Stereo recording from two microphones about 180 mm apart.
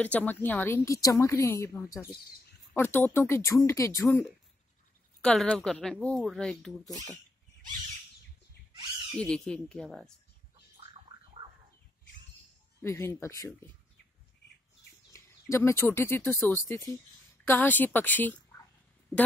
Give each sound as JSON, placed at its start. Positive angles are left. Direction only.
{"t": 0.0, "sound": "speech", "side_deg": 10}
{"t": 5.2, "sound": "speech", "side_deg": 5}
{"t": 9.2, "sound": "speech", "side_deg": 5}
{"t": 12.8, "sound": "speech", "side_deg": 15}
{"t": 15.5, "sound": "speech", "side_deg": 15}
{"t": 18.5, "sound": "a sound", "side_deg": 10}